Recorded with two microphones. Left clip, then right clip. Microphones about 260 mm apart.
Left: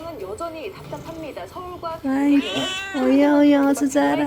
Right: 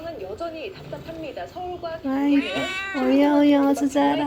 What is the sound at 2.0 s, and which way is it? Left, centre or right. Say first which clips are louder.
Speech: left 3 dB; left.